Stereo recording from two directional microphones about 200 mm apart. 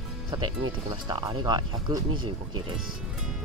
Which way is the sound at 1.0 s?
20° right (ahead or behind).